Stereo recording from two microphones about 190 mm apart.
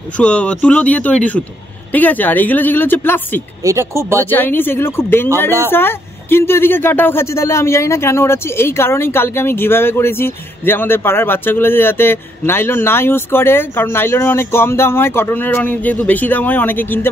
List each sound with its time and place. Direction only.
0.2 s speech: 5° left (ahead or behind)
3.6 s speech: 15° right (ahead or behind)
4.3 s speech: 10° left (ahead or behind)